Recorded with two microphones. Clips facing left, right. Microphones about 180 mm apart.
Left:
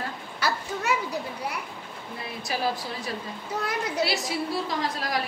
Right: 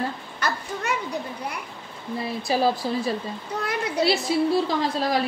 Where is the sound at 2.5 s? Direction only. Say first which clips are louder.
Right 7 dB; 30° right (ahead or behind).